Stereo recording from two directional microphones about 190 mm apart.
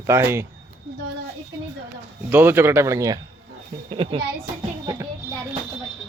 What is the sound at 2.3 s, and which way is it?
Speech, 10° right (ahead or behind).